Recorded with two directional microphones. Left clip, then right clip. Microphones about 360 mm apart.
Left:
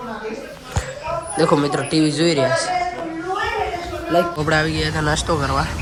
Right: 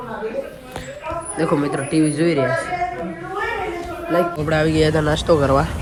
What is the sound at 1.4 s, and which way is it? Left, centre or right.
Speech, centre.